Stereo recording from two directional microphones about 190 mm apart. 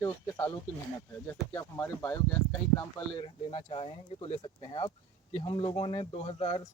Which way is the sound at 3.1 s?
30° left (ahead or behind).